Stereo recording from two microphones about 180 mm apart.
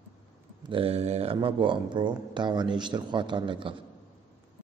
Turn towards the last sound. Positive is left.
turn(degrees=-30)  # may be behind; listen again after turning